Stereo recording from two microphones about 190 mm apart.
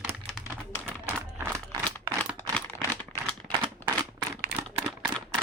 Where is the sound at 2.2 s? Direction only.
10° left (ahead or behind).